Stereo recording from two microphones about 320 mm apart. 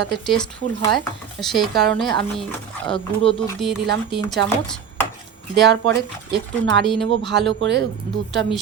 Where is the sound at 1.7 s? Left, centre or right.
Right.